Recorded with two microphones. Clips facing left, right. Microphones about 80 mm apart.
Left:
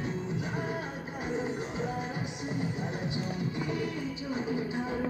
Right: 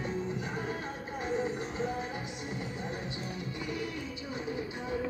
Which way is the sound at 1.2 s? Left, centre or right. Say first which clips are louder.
Even; centre.